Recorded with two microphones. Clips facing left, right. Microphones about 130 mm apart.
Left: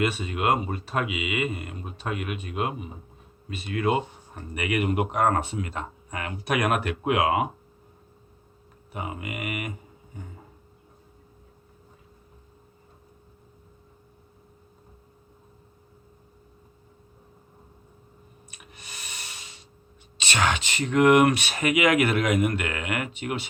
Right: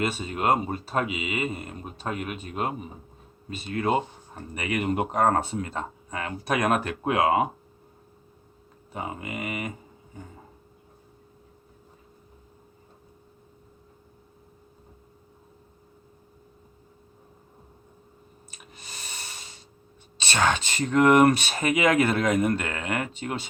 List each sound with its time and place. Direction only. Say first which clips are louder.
0.0 s speech: left 1 dB; 35° right (ahead or behind)
8.9 s speech: even; 35° right (ahead or behind)
18.5 s breathing: even; 30° right (ahead or behind)
20.2 s speech: right 1 dB; 30° right (ahead or behind)